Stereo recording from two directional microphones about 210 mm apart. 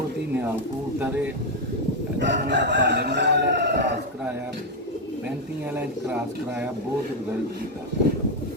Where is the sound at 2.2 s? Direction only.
55° right (ahead or behind).